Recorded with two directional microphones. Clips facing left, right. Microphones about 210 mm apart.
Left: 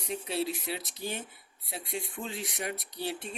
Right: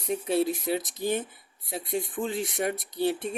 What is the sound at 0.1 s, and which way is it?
Speech, 50° right (ahead or behind).